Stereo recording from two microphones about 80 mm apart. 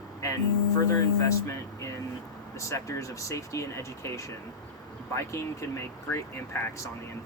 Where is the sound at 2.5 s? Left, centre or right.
Left.